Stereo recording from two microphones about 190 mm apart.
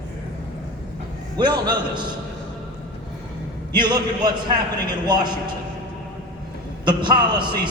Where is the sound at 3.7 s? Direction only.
25° right (ahead or behind).